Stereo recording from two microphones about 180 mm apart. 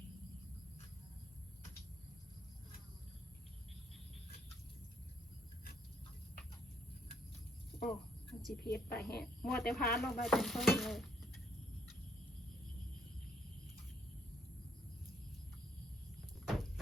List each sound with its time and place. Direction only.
7.8 s a sound: centre (ahead or behind)
8.6 s a woman's voice: 60° left (ahead or behind)
9.0 s stir: 5° left (ahead or behind)
16.5 s horse: centre (ahead or behind)